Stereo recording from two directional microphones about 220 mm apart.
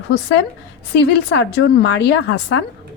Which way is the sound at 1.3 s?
50° left (ahead or behind).